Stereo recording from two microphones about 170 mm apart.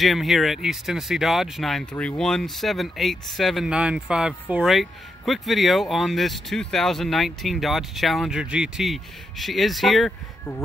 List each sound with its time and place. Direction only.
0.0 s speech: centre (ahead or behind)